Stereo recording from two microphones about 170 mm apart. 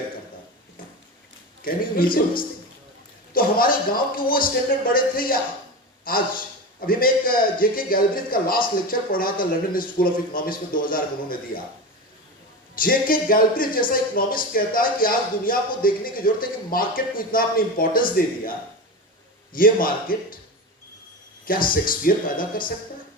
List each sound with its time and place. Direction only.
1.6 s a man's voice: 55° left (ahead or behind)
3.3 s speech: 60° left (ahead or behind)
12.7 s speech: 55° left (ahead or behind)
19.5 s speech: 55° left (ahead or behind)
21.4 s speech: 55° left (ahead or behind)